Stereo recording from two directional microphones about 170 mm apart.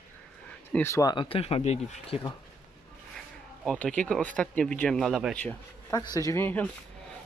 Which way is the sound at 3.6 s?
5° left (ahead or behind).